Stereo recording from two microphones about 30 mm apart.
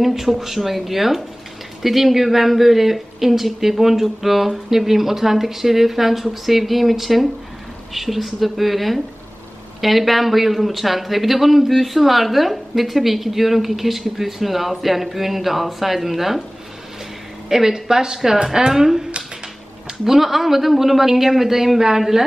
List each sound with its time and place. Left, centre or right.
0.0 s a man's voice: centre
17.5 s speech: centre
20.1 s speech: centre